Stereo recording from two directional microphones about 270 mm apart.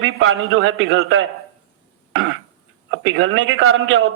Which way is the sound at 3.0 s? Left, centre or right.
Right.